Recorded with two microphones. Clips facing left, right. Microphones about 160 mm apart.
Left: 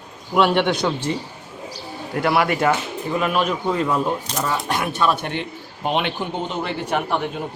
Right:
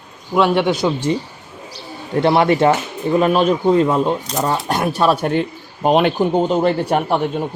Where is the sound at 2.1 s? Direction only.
30° right (ahead or behind).